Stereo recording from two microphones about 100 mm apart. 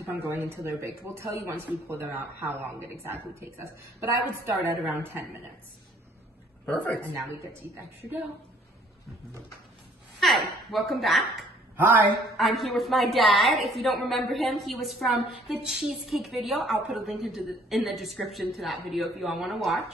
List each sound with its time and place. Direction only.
0.0 s speech: 20° right (ahead or behind)
6.6 s speech: 15° left (ahead or behind)
10.2 s a woman's voice: centre (ahead or behind)
11.7 s speech: 20° right (ahead or behind)
12.4 s a woman's voice: centre (ahead or behind)